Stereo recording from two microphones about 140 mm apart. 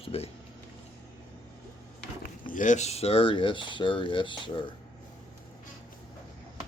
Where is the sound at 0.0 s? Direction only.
45° left (ahead or behind).